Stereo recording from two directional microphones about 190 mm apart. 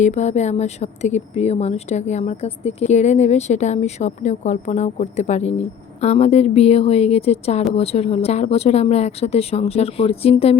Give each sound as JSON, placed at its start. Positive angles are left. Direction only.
{"t": 0.0, "sound": "speech", "side_deg": 35}